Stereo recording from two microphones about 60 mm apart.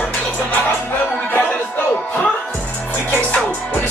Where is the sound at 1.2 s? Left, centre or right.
Left.